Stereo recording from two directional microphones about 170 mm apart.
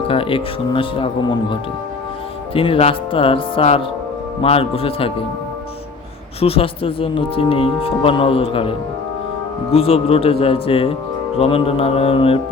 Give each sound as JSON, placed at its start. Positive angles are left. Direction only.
{"t": 0.1, "sound": "speech", "side_deg": 30}
{"t": 2.6, "sound": "speech", "side_deg": 35}
{"t": 6.4, "sound": "speech", "side_deg": 35}
{"t": 9.7, "sound": "speech", "side_deg": 35}